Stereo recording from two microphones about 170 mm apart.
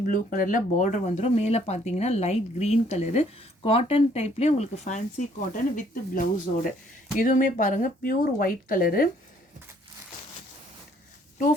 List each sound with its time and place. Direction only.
0.1 s speech: 55° left (ahead or behind)